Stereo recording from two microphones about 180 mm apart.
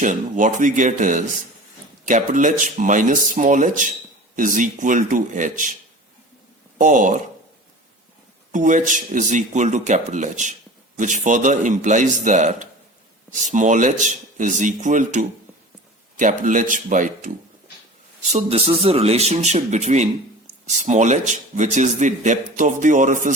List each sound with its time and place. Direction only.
0.0 s speech: 45° right (ahead or behind)
6.7 s speech: 45° right (ahead or behind)
8.5 s speech: 45° right (ahead or behind)
16.4 s speech: 45° right (ahead or behind)